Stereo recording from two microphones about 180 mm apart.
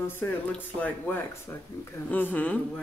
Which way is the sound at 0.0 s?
10° left (ahead or behind).